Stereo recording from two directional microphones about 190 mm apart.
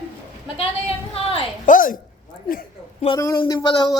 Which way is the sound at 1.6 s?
45° left (ahead or behind).